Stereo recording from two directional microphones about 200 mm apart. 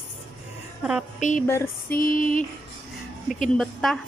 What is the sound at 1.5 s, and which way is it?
Speech, 10° left (ahead or behind).